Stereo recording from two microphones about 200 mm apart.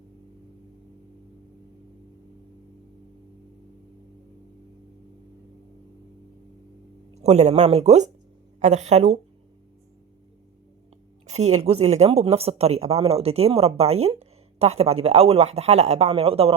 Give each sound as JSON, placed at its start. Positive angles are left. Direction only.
{"t": 7.1, "sound": "a woman's voice", "side_deg": -35}
{"t": 11.3, "sound": "speech", "side_deg": -35}